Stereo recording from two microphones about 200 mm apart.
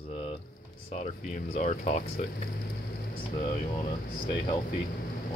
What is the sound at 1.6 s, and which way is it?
Speech, 35° left (ahead or behind).